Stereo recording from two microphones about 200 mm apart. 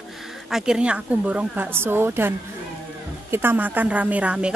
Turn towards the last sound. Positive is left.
turn(degrees=-5)  # may be behind; listen again after turning